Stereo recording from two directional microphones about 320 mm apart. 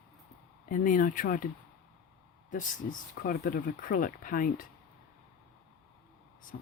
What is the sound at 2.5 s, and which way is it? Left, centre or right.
Speech, left.